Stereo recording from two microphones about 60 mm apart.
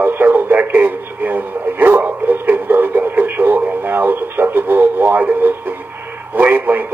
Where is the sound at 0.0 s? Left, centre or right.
Right.